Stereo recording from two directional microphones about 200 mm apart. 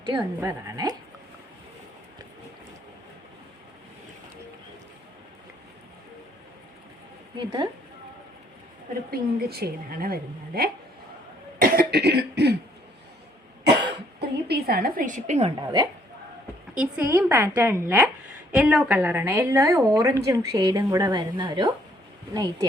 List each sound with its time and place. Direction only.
0.1 s speech: 20° right (ahead or behind)
7.3 s speech: 20° right (ahead or behind)
9.0 s a woman's voice: 50° right (ahead or behind)
11.6 s cough: 45° right (ahead or behind)
14.2 s a woman's voice: 55° right (ahead or behind); by 15.5 s 35° right (ahead or behind)
15.6 s speech: 20° right (ahead or behind)
16.7 s a woman's voice: 5° right (ahead or behind); by 21.7 s 25° right (ahead or behind)